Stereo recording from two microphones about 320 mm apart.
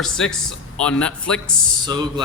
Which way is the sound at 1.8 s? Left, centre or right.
Centre.